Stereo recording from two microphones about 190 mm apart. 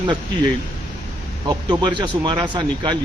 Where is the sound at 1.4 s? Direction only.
25° right (ahead or behind).